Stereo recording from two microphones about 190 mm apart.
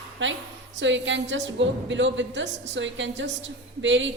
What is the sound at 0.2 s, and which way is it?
A woman's voice, 75° right (ahead or behind).